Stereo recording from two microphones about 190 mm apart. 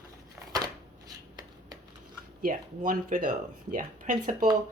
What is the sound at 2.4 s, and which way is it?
Speech, 45° right (ahead or behind).